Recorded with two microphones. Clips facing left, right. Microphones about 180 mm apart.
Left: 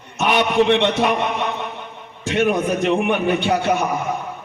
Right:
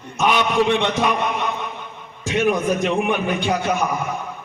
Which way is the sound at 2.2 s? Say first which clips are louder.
Left 1 dB; 65° left (ahead or behind).